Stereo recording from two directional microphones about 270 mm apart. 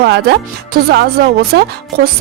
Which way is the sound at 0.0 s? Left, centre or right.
Right.